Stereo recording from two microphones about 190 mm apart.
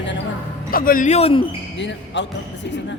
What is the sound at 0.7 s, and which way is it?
Speech, 50° left (ahead or behind).